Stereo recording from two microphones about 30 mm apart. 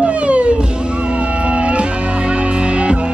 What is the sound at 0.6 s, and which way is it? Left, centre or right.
Music, right.